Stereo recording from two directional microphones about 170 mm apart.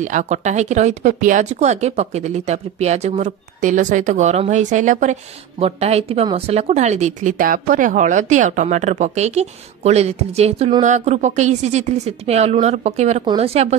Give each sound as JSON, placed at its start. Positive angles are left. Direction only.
{"t": 0.0, "sound": "a woman's voice", "side_deg": -45}